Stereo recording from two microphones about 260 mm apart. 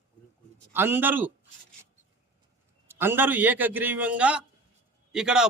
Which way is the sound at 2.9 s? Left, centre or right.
Centre.